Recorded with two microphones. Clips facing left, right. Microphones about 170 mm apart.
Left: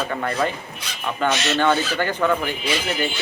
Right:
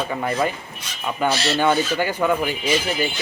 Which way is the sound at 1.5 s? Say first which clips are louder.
Right 1 dB; 10° right (ahead or behind).